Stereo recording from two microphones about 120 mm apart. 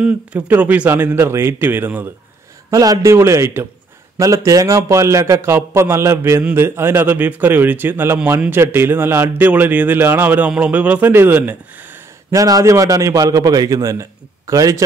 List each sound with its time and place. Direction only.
0.0 s a man's voice: 10° right (ahead or behind)
2.7 s a man's voice: 30° right (ahead or behind)
12.4 s a man's voice: 30° right (ahead or behind)